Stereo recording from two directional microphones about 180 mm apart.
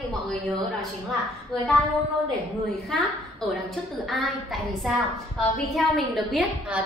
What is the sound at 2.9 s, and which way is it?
A woman's voice, centre (ahead or behind).